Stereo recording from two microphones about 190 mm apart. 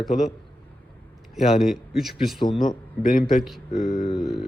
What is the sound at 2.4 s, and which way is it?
Speech, 25° left (ahead or behind).